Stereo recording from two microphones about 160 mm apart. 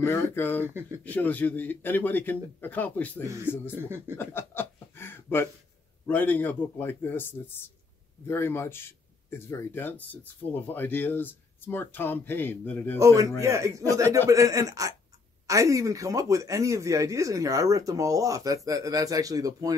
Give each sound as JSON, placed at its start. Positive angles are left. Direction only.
{"t": 0.0, "sound": "speech", "side_deg": 15}
{"t": 0.7, "sound": "speech", "side_deg": -15}
{"t": 1.0, "sound": "speech", "side_deg": 10}
{"t": 4.2, "sound": "chuckle", "side_deg": 15}
{"t": 6.0, "sound": "speech", "side_deg": 10}
{"t": 13.0, "sound": "speech", "side_deg": -20}